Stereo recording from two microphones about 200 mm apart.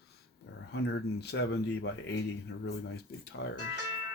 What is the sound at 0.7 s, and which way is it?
Speech, 55° left (ahead or behind).